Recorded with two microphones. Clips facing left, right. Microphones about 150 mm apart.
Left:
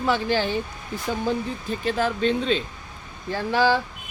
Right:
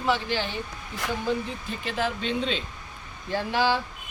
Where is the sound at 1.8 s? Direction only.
45° left (ahead or behind).